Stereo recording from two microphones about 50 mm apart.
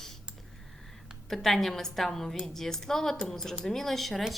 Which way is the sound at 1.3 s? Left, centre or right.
Centre.